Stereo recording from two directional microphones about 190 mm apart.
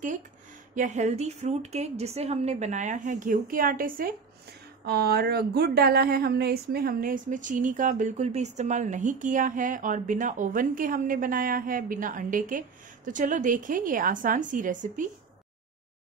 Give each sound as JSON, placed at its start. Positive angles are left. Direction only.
{"t": 0.7, "sound": "a woman's voice", "side_deg": -40}